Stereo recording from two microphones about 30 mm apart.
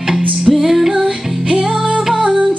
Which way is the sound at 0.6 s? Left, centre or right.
Centre.